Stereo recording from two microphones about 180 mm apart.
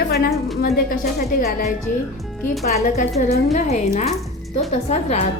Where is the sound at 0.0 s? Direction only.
65° left (ahead or behind).